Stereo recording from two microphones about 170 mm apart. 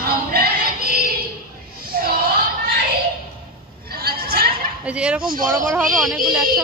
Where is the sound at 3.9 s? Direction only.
65° right (ahead or behind).